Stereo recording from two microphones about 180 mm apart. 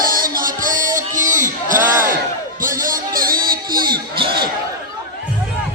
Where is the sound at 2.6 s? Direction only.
50° right (ahead or behind).